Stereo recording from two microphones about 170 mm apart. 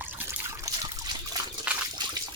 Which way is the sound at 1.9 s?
25° right (ahead or behind).